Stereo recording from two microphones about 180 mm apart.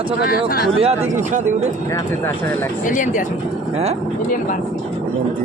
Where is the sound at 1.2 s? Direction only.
40° right (ahead or behind).